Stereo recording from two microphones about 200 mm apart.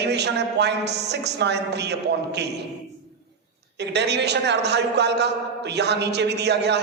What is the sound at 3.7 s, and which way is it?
A man's voice, 60° right (ahead or behind).